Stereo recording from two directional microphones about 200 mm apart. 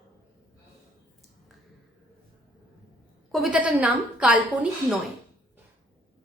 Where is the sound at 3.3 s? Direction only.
Centre (ahead or behind).